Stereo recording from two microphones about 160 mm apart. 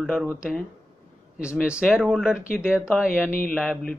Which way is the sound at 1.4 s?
5° right (ahead or behind).